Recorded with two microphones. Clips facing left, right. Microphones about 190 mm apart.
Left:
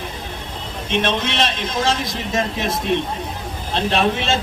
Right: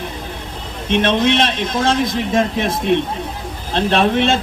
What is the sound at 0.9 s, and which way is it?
A man's voice, 55° right (ahead or behind).